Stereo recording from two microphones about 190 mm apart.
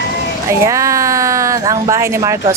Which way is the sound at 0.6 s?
15° right (ahead or behind).